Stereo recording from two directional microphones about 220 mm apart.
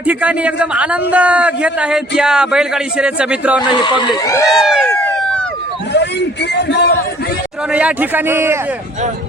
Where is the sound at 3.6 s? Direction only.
20° left (ahead or behind).